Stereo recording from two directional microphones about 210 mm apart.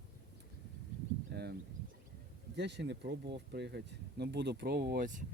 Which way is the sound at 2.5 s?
55° right (ahead or behind).